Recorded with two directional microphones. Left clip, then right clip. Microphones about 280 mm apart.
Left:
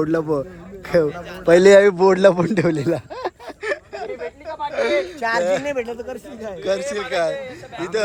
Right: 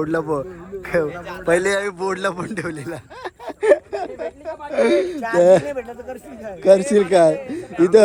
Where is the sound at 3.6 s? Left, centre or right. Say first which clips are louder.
Right 10 dB; centre.